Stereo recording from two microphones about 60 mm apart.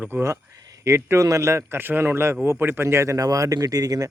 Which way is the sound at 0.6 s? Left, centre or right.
Right.